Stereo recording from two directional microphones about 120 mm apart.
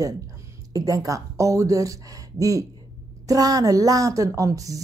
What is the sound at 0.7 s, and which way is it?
A woman's voice, 30° right (ahead or behind).